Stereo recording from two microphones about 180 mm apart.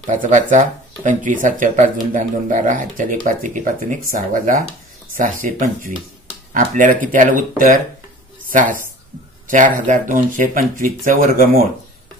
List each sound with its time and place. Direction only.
0.0 s speech: 45° right (ahead or behind)
9.5 s speech: 45° right (ahead or behind)